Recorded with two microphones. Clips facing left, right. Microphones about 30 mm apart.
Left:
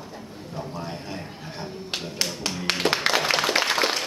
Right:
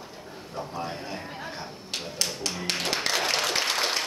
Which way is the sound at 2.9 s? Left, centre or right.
Left.